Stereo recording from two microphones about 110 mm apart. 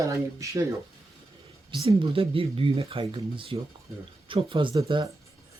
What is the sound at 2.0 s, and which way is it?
Speech, 55° right (ahead or behind).